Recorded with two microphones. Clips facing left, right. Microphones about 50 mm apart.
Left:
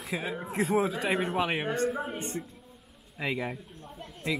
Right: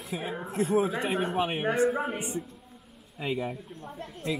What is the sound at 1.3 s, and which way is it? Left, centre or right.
Speech, left.